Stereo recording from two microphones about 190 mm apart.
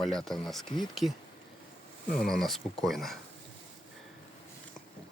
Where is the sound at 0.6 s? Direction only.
25° left (ahead or behind).